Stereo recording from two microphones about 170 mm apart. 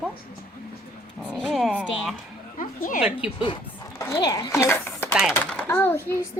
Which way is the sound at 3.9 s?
20° left (ahead or behind).